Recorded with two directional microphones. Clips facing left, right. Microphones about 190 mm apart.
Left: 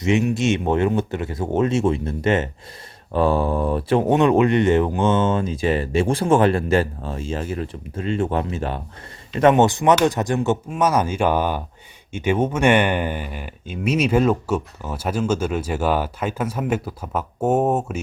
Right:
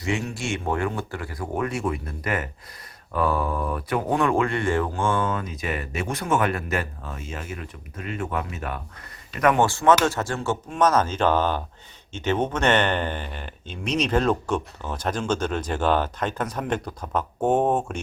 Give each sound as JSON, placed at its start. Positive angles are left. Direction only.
{"t": 0.0, "sound": "speech", "side_deg": 20}